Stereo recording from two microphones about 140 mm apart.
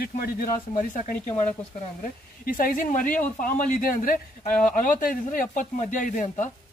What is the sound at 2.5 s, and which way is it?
Speech, 85° left.